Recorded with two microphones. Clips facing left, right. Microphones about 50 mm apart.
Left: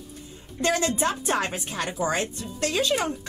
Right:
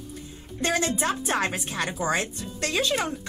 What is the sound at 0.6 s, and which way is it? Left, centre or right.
A woman's voice, right.